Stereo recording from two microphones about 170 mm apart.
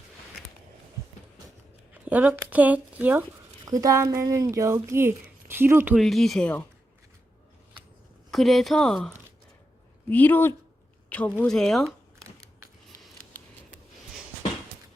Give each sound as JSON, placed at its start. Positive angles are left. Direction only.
{"t": 1.9, "sound": "speech", "side_deg": -10}
{"t": 6.0, "sound": "speech", "side_deg": 0}
{"t": 8.3, "sound": "speech", "side_deg": 0}